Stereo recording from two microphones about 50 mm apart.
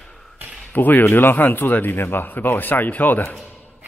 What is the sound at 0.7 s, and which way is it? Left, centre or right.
Speech, left.